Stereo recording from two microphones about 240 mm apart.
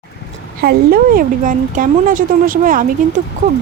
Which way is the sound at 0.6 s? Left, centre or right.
Right.